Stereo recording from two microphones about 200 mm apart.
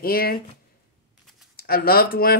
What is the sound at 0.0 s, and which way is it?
Speech, 45° left (ahead or behind).